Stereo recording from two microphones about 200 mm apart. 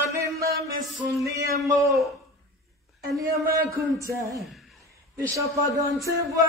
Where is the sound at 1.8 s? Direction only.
Centre (ahead or behind).